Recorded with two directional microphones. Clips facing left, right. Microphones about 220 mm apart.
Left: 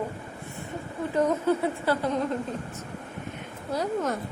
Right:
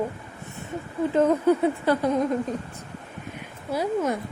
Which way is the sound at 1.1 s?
15° right (ahead or behind).